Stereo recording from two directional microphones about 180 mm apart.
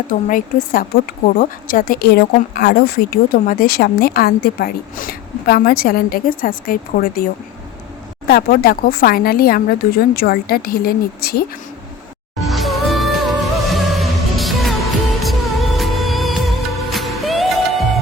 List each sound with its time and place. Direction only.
0.1 s a woman's voice: 50° left (ahead or behind)
8.3 s a woman's voice: 60° left (ahead or behind)
12.4 s music: centre (ahead or behind)